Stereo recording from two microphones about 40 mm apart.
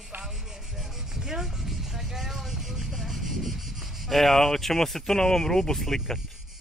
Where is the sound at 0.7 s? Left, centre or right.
Centre.